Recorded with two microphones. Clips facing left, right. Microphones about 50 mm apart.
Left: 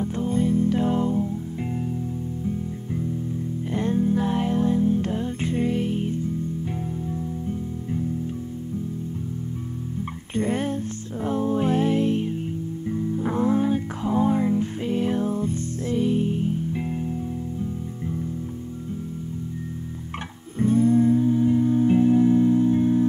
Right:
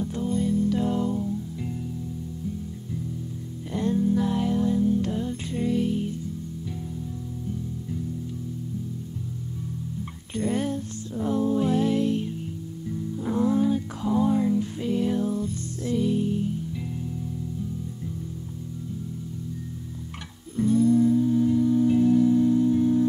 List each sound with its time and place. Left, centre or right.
0.0 s music: left
3.7 s music: left
10.4 s music: left
20.5 s music: left